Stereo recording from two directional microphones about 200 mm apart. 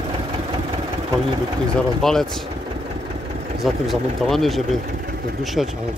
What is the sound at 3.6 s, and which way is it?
Speech, centre (ahead or behind).